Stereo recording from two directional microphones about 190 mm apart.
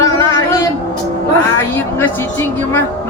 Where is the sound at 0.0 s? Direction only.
15° left (ahead or behind).